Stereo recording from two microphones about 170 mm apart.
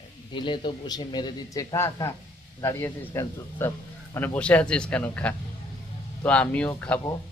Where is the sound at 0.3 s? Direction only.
30° left (ahead or behind); by 7.0 s 10° left (ahead or behind).